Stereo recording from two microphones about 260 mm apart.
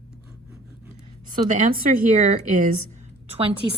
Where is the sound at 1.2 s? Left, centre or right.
Right.